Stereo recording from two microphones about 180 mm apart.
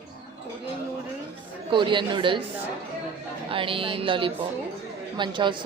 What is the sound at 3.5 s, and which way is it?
Speech, 30° right (ahead or behind).